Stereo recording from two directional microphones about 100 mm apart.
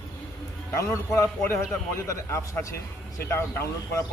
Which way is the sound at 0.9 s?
30° left (ahead or behind).